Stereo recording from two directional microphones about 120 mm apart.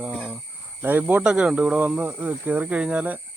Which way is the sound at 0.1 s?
Centre (ahead or behind).